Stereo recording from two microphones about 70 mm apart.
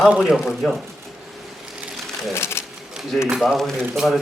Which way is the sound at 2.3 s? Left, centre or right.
Left.